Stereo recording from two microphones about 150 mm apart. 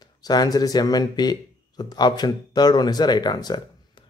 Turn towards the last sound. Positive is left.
turn(degrees=30)  # may be behind; listen again after turning